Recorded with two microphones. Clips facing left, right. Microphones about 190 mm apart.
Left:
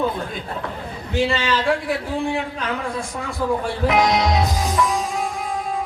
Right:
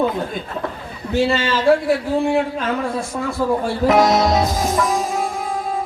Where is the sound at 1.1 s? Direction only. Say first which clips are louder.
Right 3 dB; 40° right (ahead or behind).